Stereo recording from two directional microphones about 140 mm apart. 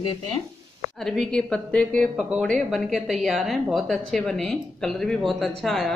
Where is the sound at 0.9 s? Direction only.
5° left (ahead or behind).